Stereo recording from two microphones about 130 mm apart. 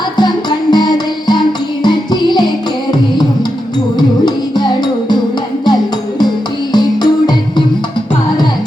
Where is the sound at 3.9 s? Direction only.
35° left (ahead or behind).